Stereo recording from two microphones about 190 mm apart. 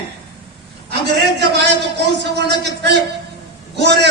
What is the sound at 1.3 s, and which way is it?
A man's voice, 60° right (ahead or behind).